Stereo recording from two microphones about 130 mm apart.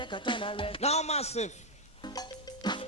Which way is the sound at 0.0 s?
40° left (ahead or behind).